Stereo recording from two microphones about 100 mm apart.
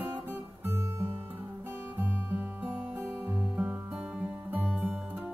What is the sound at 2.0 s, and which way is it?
Music, 20° right (ahead or behind).